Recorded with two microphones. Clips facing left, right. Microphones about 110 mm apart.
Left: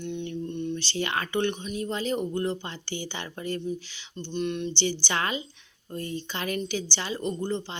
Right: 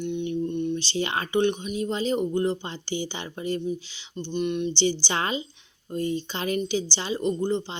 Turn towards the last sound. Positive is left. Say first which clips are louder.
# right 4 dB
turn(degrees=-20)  # may be behind; listen again after turning